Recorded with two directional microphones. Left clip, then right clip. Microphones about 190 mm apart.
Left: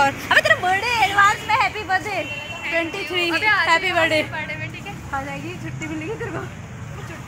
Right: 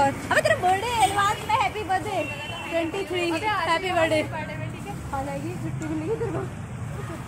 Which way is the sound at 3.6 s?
20° left (ahead or behind).